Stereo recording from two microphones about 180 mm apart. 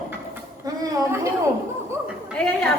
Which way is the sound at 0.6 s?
20° right (ahead or behind).